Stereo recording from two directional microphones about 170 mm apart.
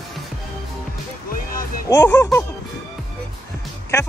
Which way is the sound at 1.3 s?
55° left (ahead or behind).